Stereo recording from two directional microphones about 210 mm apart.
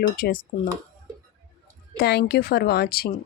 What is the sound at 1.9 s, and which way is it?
Speech, 50° left (ahead or behind).